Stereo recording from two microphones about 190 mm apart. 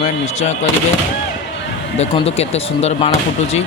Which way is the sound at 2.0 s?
35° left (ahead or behind).